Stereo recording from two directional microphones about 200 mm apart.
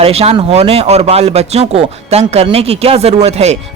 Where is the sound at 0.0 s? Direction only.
30° right (ahead or behind).